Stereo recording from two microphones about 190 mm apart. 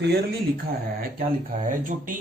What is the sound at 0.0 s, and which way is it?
Speech, 60° right (ahead or behind).